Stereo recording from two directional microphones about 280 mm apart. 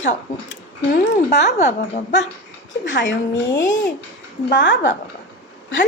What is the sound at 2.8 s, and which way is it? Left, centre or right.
Speech, left.